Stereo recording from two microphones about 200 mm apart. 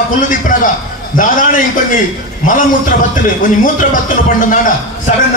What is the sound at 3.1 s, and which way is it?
A man's voice, 45° left (ahead or behind).